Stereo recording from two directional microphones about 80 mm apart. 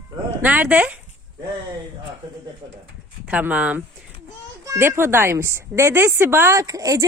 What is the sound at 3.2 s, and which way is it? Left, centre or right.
Speech, centre.